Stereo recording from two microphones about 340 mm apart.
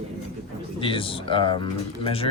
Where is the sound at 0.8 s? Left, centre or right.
Centre.